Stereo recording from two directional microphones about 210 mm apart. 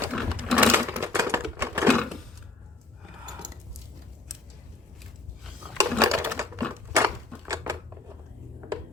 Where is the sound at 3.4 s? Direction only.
20° right (ahead or behind).